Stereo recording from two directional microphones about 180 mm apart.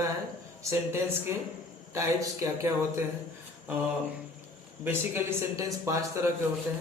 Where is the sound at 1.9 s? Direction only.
15° right (ahead or behind).